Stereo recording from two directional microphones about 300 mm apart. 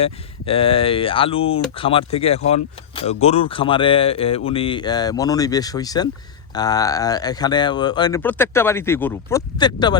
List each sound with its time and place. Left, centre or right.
0.0 s speech: centre